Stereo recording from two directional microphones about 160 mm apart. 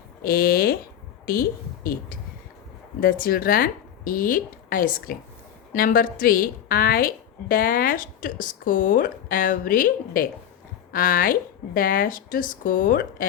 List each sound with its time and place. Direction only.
0.2 s a woman's voice: 70° left (ahead or behind)